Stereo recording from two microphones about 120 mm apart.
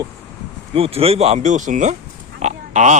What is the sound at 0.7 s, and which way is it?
Speech, 55° right (ahead or behind).